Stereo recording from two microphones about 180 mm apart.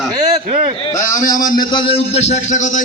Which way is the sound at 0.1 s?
20° right (ahead or behind).